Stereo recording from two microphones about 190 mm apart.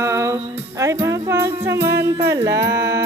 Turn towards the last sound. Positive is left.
turn(degrees=-15)  # may be behind; listen again after turning